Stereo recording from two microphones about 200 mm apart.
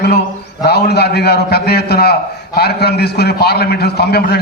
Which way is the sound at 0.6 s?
55° left (ahead or behind).